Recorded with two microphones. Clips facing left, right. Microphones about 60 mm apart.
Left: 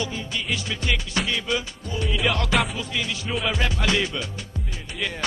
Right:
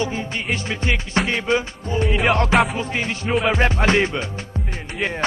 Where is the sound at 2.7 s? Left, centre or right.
Right.